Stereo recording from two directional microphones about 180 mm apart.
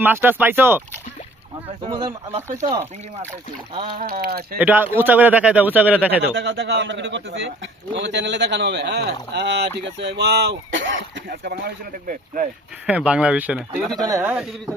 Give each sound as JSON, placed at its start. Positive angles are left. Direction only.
{"t": 0.0, "sound": "speech", "side_deg": -10}
{"t": 1.8, "sound": "speech", "side_deg": -30}
{"t": 3.9, "sound": "speech", "side_deg": -55}
{"t": 4.5, "sound": "speech", "side_deg": -10}
{"t": 6.3, "sound": "a man's voice", "side_deg": -75}
{"t": 10.7, "sound": "speech", "side_deg": -90}
{"t": 12.9, "sound": "speech", "side_deg": -5}